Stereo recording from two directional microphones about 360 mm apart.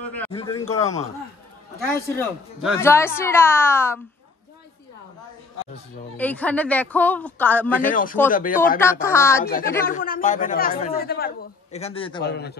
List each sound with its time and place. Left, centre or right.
0.0 s a sound: centre
0.3 s a woman's voice: centre
2.0 s a woman's voice: centre
6.1 s speech: centre
7.8 s speech: left
9.0 s a woman's voice: centre
9.4 s speech: left
12.2 s speech: left